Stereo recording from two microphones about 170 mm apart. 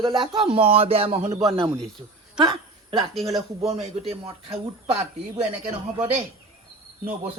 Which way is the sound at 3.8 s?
35° right (ahead or behind).